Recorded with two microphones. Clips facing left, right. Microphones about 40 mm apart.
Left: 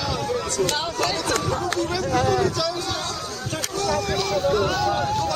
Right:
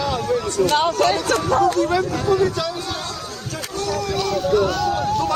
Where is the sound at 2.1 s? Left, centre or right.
Left.